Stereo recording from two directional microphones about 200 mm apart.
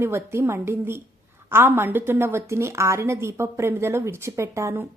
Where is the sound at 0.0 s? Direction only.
10° right (ahead or behind).